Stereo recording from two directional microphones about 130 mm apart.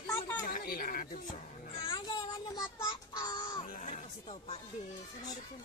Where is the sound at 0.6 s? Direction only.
90° left.